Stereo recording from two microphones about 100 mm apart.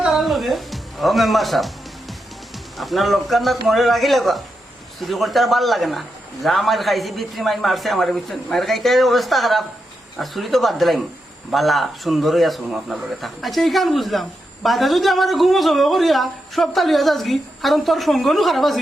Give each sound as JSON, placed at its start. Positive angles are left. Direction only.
{"t": 0.0, "sound": "music", "side_deg": 0}
{"t": 2.7, "sound": "speech", "side_deg": 0}